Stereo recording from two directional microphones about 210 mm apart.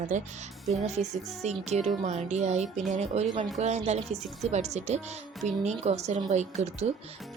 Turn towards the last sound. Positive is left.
turn(degrees=-30)  # may be behind; listen again after turning